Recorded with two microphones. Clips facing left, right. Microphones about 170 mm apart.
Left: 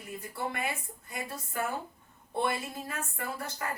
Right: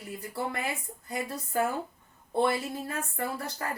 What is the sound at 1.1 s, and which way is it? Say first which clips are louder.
A woman's voice: right 5 dB; 35° right (ahead or behind).